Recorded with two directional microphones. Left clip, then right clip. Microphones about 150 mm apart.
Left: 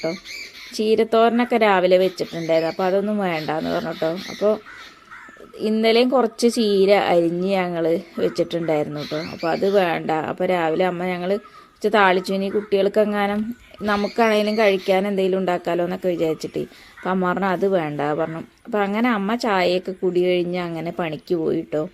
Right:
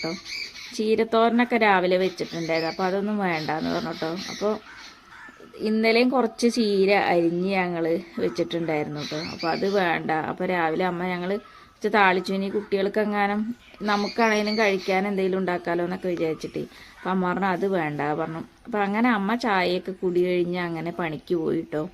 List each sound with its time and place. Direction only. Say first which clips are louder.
0.8 s speech: left 4 dB; 10° left (ahead or behind)
5.7 s speech: left 4 dB; 15° left (ahead or behind)
14.2 s speech: left 5 dB; 15° left (ahead or behind)